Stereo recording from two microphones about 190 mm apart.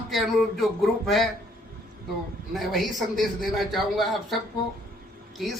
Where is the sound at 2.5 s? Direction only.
Centre (ahead or behind).